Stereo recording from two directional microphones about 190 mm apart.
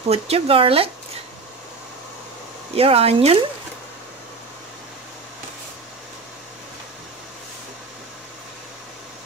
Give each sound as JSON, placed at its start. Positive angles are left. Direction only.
{"t": 0.1, "sound": "speech", "side_deg": -30}
{"t": 2.7, "sound": "speech", "side_deg": -30}